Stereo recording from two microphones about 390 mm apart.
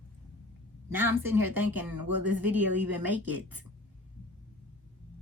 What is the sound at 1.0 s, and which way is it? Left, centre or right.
Speech, right.